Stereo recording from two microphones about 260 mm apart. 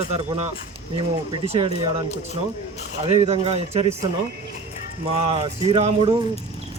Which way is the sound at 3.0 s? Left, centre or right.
Right.